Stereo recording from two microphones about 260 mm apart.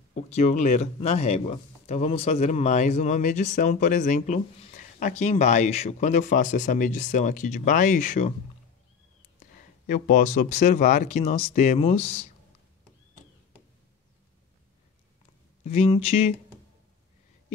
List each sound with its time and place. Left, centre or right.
0.1 s speech: left
9.6 s speech: left
15.6 s speech: left